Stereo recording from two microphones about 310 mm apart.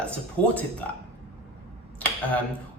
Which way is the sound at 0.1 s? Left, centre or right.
Centre.